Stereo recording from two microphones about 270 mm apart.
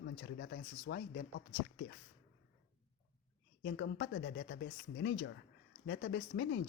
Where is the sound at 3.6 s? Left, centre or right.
Left.